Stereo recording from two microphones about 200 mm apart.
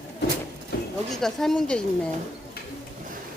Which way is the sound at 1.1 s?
Centre (ahead or behind).